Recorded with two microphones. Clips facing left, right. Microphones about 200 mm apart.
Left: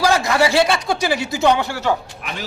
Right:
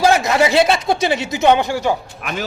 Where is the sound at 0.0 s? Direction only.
20° right (ahead or behind).